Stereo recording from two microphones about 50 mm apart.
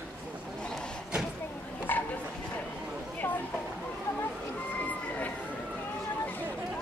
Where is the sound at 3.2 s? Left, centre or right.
Left.